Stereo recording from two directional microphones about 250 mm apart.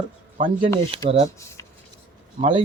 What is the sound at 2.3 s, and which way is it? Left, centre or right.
Speech, right.